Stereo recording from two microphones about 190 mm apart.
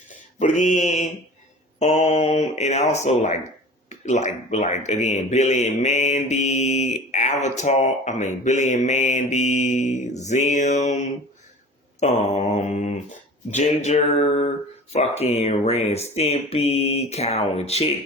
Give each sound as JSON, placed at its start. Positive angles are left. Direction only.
{"t": 0.3, "sound": "speech", "side_deg": 40}